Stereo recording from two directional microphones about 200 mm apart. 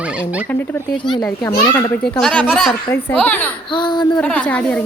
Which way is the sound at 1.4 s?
15° left (ahead or behind).